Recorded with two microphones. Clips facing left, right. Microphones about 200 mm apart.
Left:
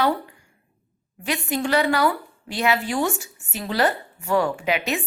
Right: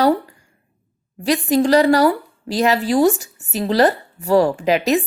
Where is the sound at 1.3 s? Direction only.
35° right (ahead or behind).